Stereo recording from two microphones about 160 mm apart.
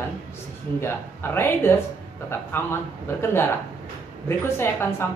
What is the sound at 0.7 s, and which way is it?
Speech, 15° left (ahead or behind).